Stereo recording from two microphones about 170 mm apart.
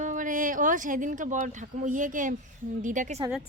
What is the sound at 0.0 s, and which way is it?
A woman's voice, 50° right (ahead or behind).